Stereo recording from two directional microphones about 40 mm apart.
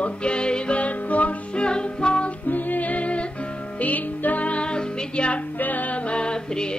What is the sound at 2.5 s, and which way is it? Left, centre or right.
Music, left.